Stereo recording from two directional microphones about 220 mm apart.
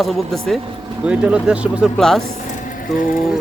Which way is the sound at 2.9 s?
40° left (ahead or behind).